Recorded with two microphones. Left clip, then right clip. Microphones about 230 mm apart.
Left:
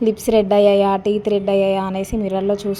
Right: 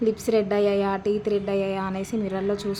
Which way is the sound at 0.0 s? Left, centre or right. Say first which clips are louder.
Left 6 dB; centre.